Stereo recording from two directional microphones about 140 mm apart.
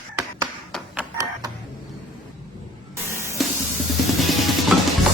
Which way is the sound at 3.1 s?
20° right (ahead or behind).